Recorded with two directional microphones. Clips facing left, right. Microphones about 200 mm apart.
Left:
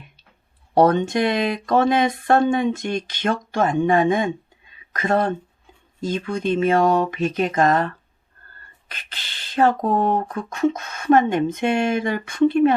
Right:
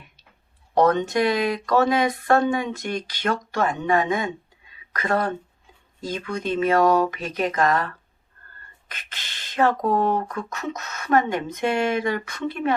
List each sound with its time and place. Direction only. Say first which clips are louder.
0.7 s speech: left 3 dB; 30° left (ahead or behind)
8.9 s a sound: left 1 dB; 35° left (ahead or behind)
9.6 s speech: left 2 dB; 25° left (ahead or behind)